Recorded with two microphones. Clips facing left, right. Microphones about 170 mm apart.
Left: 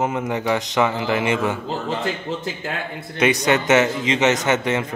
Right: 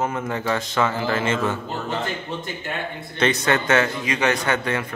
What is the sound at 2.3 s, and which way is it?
Speech, 90° left.